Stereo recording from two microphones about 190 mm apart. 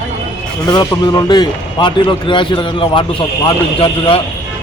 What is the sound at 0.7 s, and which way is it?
Speech, 20° left (ahead or behind).